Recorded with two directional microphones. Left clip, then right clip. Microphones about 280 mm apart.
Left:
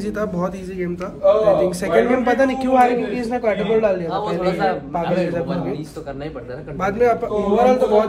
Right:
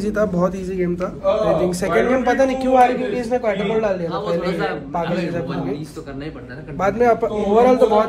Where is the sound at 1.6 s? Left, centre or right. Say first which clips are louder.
Left 1 dB; centre.